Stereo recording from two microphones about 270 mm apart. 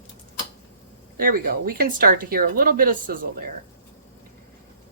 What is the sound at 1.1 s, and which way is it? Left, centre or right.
Speech, right.